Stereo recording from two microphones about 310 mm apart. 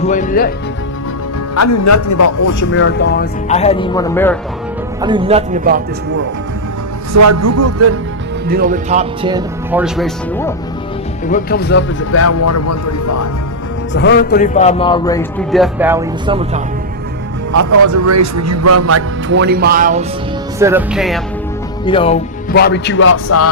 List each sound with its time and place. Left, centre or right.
0.0 s speech: left
1.5 s a man's voice: left
2.7 s speech: left; by 4.4 s centre
4.9 s speech: centre
7.1 s a man's voice: right
8.4 s speech: right
9.8 s speech: centre
11.3 s speech: left
13.9 s a man's voice: left; by 16.5 s centre
17.6 s speech: right
20.6 s speech: centre
21.8 s a man's voice: centre
22.5 s speech: left